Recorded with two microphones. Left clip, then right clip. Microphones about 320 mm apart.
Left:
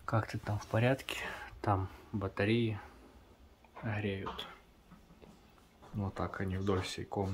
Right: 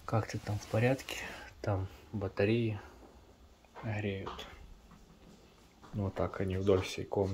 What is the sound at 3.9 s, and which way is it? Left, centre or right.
Speech, centre.